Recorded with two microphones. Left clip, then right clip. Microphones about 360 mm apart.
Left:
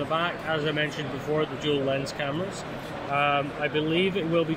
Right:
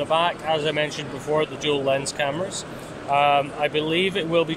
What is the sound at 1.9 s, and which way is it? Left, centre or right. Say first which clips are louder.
Speech: right 5 dB; centre.